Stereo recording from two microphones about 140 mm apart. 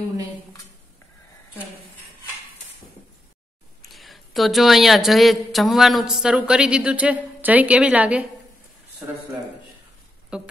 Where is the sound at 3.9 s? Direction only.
Centre (ahead or behind).